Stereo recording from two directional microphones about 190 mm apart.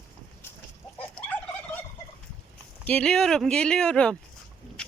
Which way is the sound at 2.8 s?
5° left (ahead or behind).